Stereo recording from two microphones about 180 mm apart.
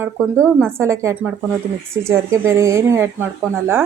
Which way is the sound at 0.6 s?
15° right (ahead or behind).